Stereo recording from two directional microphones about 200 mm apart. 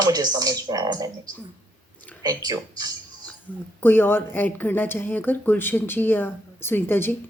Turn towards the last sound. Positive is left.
turn(degrees=10)  # may be behind; listen again after turning